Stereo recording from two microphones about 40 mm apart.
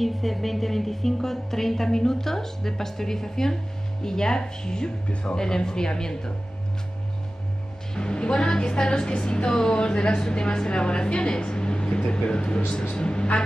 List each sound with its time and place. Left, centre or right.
0.0 s music: centre
5.0 s speech: left
5.3 s music: centre
7.9 s a woman's voice: left